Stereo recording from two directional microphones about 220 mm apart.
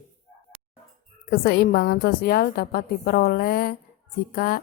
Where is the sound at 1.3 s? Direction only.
45° left (ahead or behind).